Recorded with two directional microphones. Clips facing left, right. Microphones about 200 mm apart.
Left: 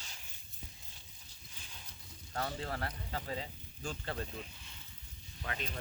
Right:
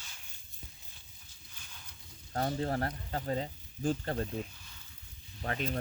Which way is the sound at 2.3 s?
40° right (ahead or behind).